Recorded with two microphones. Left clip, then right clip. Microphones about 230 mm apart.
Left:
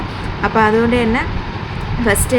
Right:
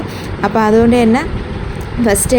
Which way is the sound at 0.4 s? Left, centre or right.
Centre.